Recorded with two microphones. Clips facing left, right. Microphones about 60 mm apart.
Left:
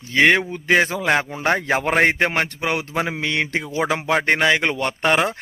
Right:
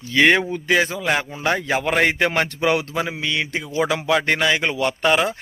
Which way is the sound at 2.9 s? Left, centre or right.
Left.